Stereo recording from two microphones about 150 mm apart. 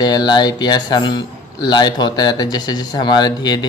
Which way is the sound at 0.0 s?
25° left (ahead or behind).